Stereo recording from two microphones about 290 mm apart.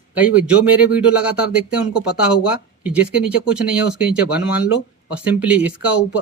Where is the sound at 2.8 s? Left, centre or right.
Centre.